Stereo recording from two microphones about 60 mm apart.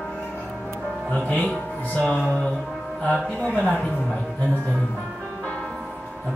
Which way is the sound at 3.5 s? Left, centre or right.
Centre.